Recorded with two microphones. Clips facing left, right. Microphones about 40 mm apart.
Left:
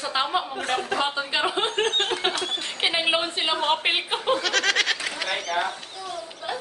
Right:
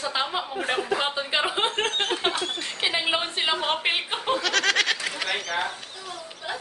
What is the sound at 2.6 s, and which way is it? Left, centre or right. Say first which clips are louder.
A woman's voice: left 3 dB; centre.